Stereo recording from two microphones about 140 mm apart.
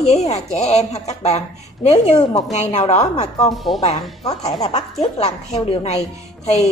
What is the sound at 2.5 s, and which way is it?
A woman's voice, 55° left (ahead or behind).